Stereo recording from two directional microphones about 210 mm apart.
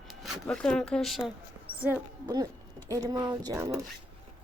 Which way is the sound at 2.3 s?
20° right (ahead or behind).